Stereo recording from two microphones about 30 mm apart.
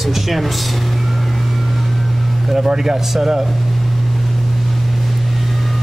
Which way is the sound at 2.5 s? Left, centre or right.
Centre.